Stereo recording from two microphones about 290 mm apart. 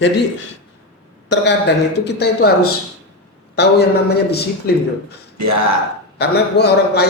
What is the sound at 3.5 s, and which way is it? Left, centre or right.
A man's voice, left.